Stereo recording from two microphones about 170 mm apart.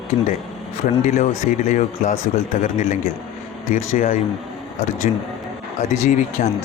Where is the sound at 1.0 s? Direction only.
45° left (ahead or behind).